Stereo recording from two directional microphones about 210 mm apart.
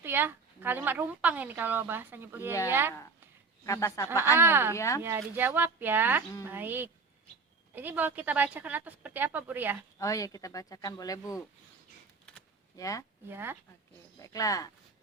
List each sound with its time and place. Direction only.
0.0 s a woman's voice: 10° right (ahead or behind)
3.7 s speech: 15° left (ahead or behind)
4.4 s a woman's voice: 10° right (ahead or behind)
4.8 s speech: 15° left (ahead or behind)
5.0 s a woman's voice: 10° right (ahead or behind)
10.0 s speech: 15° left (ahead or behind)
12.7 s speech: 15° left (ahead or behind)
13.2 s a woman's voice: 10° right (ahead or behind)
14.2 s speech: 15° left (ahead or behind)